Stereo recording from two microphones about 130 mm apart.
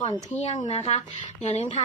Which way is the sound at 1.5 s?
60° left (ahead or behind).